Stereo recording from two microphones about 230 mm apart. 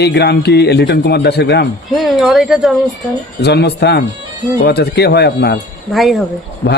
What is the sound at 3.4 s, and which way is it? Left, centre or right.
A man's voice, left.